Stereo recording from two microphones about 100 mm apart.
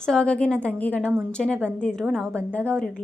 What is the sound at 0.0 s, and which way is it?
A woman's voice, 10° left (ahead or behind).